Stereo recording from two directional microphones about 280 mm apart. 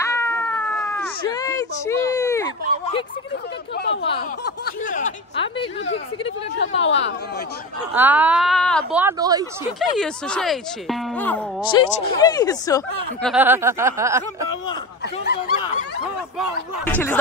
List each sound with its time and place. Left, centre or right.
0.0 s cat: centre
1.2 s speech: centre
3.7 s speech: left
5.9 s speech: left
7.9 s speech: centre
9.0 s speech: centre
9.8 s speech: centre
13.2 s speech: centre
15.2 s speech: left
16.8 s speech: centre